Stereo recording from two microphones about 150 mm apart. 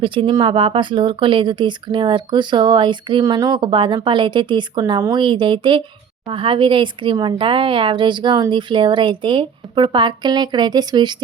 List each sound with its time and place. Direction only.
0.0 s speech: 35° right (ahead or behind)